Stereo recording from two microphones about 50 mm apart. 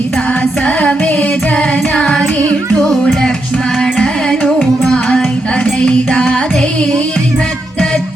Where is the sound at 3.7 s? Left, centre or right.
Centre.